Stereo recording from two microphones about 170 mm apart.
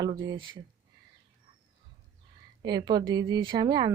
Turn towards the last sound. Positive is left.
turn(degrees=-25)  # may be behind; listen again after turning